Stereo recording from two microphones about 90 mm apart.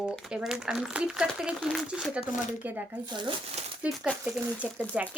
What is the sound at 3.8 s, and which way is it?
A woman's voice, 15° right (ahead or behind).